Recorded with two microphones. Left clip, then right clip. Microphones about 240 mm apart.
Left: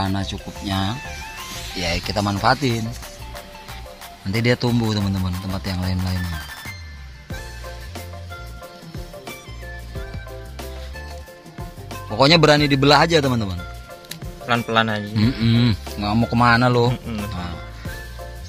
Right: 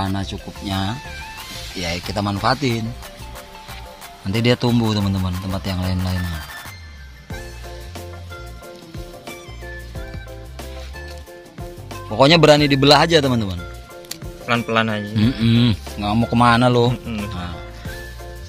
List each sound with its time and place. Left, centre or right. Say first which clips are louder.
0.0 s speech: even; centre
4.3 s speech: right 2 dB; centre
11.9 s speech: right 2 dB; centre
15.1 s speech: right 3 dB; centre
17.2 s music: right 1 dB; centre